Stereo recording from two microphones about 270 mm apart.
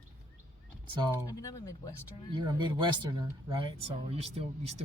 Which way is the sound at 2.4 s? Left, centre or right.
Centre.